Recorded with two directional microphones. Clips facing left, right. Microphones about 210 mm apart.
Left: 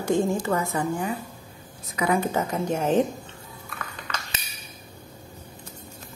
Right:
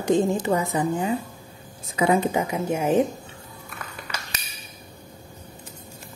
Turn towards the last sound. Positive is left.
turn(degrees=-10)  # may be behind; listen again after turning